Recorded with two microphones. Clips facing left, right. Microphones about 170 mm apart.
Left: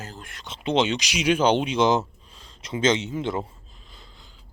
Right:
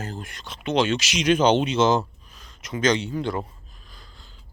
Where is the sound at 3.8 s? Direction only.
25° left (ahead or behind).